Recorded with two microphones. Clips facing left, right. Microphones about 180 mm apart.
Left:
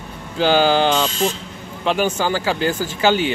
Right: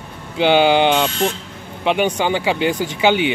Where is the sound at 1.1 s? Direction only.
60° right (ahead or behind).